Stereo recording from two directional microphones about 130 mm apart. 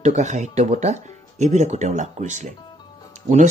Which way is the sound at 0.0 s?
65° right (ahead or behind).